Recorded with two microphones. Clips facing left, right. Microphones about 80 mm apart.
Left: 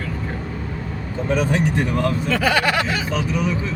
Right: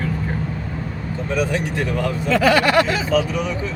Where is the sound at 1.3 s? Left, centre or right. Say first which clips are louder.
Left 1 dB; left.